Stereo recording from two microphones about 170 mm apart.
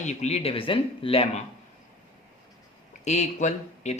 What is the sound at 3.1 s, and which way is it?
Speech, 40° left (ahead or behind).